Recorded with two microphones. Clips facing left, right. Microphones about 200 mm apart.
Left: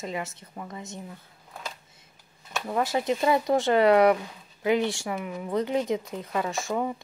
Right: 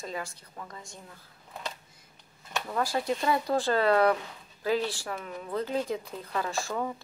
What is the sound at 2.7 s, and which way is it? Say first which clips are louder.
Speech: left 4 dB; 20° left (ahead or behind).